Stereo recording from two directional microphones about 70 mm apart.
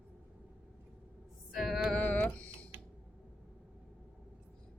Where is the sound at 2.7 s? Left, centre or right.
Right.